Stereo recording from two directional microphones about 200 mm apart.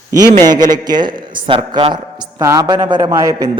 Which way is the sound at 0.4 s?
20° right (ahead or behind).